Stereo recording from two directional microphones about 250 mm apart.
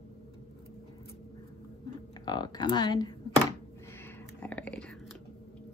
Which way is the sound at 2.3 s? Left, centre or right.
Centre.